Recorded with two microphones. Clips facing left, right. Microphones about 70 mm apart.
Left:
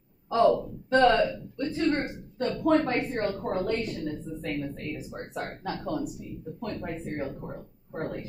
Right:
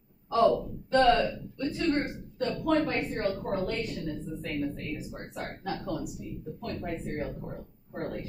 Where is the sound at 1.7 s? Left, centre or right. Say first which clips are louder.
Left 1 dB; left.